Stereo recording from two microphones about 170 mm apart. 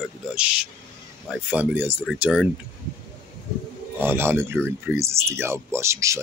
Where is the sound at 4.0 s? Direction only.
15° right (ahead or behind).